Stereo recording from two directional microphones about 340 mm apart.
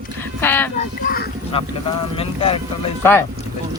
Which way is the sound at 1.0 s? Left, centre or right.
Left.